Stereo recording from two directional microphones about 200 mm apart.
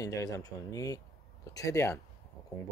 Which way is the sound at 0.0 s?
20° left (ahead or behind).